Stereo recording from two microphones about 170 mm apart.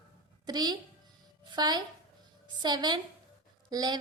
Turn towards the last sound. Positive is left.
turn(degrees=-25)  # may be behind; listen again after turning